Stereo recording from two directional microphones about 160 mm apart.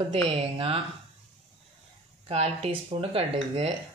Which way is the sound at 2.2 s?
40° right (ahead or behind).